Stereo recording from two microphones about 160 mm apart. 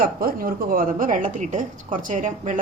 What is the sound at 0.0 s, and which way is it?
A woman's voice, 65° right (ahead or behind).